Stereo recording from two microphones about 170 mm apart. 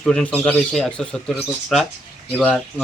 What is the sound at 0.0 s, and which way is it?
Speech, 5° left (ahead or behind).